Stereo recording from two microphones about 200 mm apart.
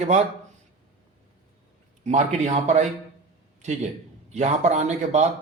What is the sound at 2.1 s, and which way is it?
A man's voice, 35° right (ahead or behind).